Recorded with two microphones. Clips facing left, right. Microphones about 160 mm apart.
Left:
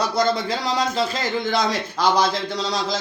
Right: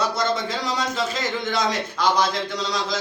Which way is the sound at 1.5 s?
35° left (ahead or behind).